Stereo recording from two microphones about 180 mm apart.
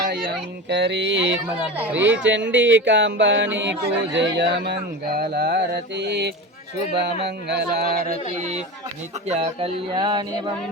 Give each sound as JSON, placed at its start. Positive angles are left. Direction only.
{"t": 0.7, "sound": "speech", "side_deg": -70}
{"t": 1.9, "sound": "speech", "side_deg": -10}
{"t": 2.1, "sound": "speech", "side_deg": -90}
{"t": 7.0, "sound": "a sound", "side_deg": -70}
{"t": 9.2, "sound": "a man's voice", "side_deg": -40}